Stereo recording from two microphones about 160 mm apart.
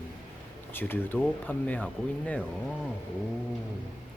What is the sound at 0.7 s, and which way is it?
Speech, 10° left (ahead or behind).